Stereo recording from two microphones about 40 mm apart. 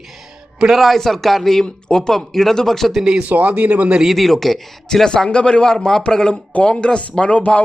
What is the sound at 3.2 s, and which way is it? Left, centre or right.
Speech, right.